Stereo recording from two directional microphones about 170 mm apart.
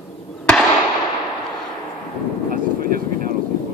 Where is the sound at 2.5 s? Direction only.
55° right (ahead or behind).